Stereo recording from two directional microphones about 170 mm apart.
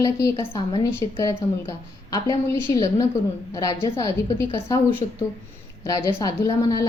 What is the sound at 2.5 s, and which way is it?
Speech, 20° left (ahead or behind).